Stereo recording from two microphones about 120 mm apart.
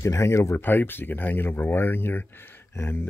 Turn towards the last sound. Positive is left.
turn(degrees=20)  # may be behind; listen again after turning